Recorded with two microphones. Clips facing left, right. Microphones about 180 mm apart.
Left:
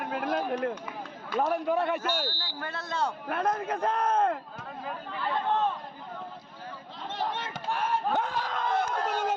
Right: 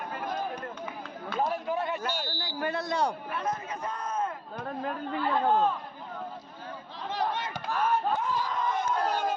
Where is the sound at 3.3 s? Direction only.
60° left (ahead or behind).